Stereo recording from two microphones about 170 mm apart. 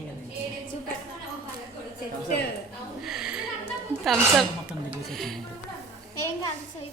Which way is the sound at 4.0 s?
Centre (ahead or behind).